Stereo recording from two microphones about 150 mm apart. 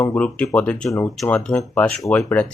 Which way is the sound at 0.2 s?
10° left (ahead or behind).